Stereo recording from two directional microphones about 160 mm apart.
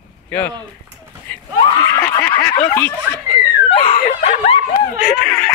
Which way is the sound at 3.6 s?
35° left (ahead or behind).